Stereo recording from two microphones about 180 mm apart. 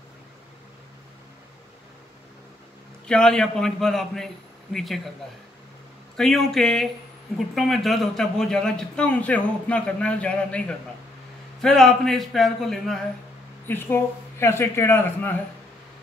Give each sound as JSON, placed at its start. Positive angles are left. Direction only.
{"t": 3.1, "sound": "a man's voice", "side_deg": 5}
{"t": 6.1, "sound": "a man's voice", "side_deg": 0}
{"t": 13.7, "sound": "speech", "side_deg": 10}